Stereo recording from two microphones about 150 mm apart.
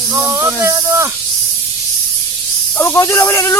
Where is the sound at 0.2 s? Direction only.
15° right (ahead or behind).